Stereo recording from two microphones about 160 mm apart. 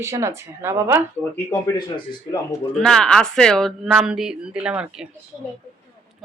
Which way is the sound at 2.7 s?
5° left (ahead or behind).